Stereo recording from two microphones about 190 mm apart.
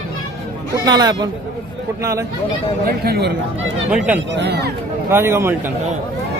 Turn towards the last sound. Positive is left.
turn(degrees=-15)  # may be behind; listen again after turning